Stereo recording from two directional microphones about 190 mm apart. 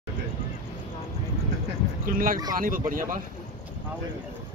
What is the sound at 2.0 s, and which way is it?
Speech, 45° right (ahead or behind).